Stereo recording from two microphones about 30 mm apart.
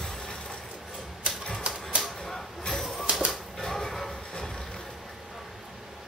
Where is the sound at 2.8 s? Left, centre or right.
Centre.